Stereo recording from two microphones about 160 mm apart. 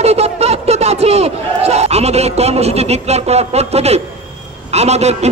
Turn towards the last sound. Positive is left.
turn(degrees=-45)  # may be behind; listen again after turning